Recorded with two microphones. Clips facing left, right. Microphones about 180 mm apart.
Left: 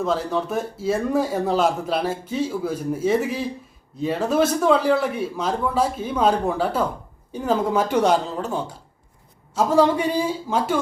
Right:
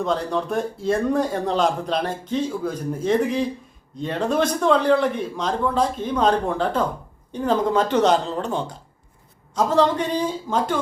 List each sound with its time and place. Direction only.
0.0 s a man's voice: 5° left (ahead or behind)